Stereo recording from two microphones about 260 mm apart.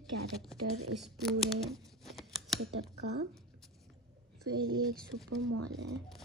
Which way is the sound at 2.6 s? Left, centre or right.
Right.